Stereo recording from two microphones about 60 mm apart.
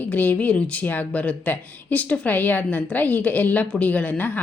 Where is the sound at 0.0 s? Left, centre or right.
Left.